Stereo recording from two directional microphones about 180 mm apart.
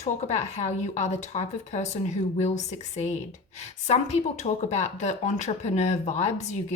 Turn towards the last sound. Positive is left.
turn(degrees=40)  # may be behind; listen again after turning